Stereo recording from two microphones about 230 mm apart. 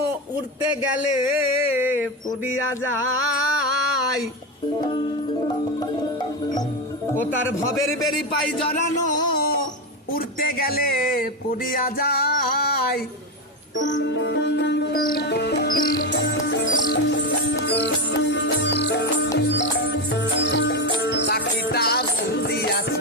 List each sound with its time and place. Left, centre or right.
1.7 s a sound: centre
3.2 s music: left
4.8 s music: centre
8.6 s music: left
10.2 s speech: left
11.7 s music: left